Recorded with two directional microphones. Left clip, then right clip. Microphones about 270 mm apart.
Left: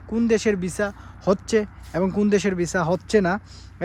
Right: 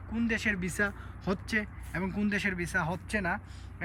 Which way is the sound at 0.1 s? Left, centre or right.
Centre.